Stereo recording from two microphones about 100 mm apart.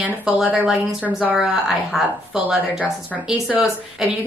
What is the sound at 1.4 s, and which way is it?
A woman's voice, centre (ahead or behind).